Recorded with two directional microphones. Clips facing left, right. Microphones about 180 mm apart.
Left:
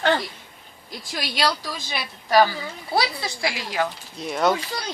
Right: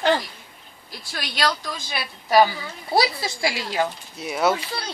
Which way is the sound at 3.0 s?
25° right (ahead or behind).